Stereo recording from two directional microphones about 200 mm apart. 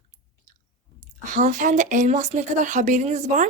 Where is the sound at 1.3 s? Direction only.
40° right (ahead or behind).